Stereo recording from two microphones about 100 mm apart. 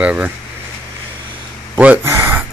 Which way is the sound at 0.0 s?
15° right (ahead or behind).